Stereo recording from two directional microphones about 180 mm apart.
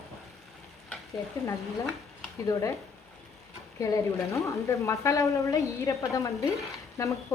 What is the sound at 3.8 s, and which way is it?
A woman's voice, 15° left (ahead or behind).